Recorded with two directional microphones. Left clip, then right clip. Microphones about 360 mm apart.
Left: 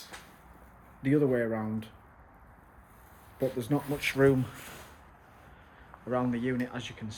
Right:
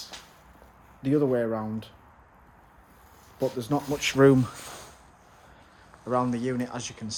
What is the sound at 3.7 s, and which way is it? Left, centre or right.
Speech, centre.